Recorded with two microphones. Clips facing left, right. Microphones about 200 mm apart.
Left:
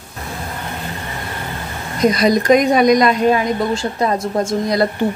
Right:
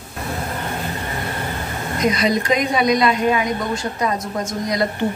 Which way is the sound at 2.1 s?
40° left (ahead or behind).